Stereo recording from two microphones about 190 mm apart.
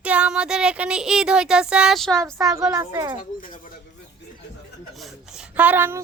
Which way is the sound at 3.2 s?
45° left (ahead or behind).